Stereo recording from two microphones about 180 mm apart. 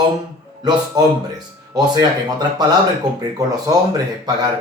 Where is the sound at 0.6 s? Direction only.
25° right (ahead or behind).